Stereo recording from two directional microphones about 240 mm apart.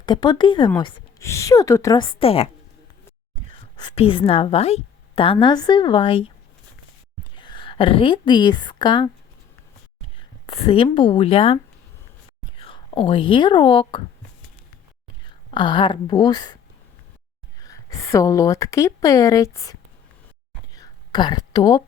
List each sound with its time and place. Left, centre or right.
0.0 s a woman's voice: centre
3.8 s a woman's voice: left
7.3 s a woman's voice: centre
10.2 s speech: left
15.4 s a woman's voice: centre
17.6 s a woman's voice: centre
20.7 s a sound: centre